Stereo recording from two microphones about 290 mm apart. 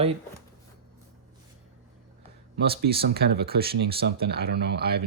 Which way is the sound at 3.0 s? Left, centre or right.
Right.